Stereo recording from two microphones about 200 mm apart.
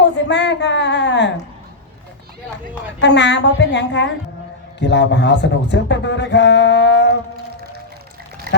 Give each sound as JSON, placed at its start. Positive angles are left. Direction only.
{"t": 0.0, "sound": "a sound", "side_deg": 60}
{"t": 3.0, "sound": "speech", "side_deg": 60}
{"t": 8.5, "sound": "duck", "side_deg": -55}